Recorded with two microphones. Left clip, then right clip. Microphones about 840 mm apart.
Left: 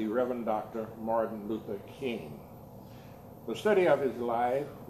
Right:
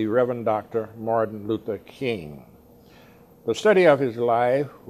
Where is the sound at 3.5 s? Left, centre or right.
Right.